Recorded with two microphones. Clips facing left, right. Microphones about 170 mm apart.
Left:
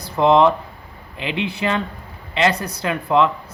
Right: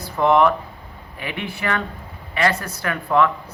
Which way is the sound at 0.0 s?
20° left (ahead or behind).